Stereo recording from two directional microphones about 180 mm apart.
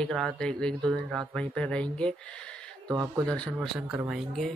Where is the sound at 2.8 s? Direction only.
20° right (ahead or behind).